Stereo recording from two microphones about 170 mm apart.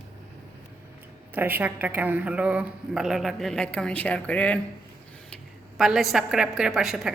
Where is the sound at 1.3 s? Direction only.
10° right (ahead or behind).